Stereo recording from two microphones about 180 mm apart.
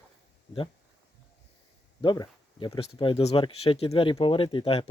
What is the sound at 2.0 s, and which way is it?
Speech, 25° left (ahead or behind).